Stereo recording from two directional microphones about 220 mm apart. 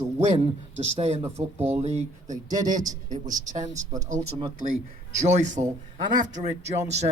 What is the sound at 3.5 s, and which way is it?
Speech, 35° right (ahead or behind).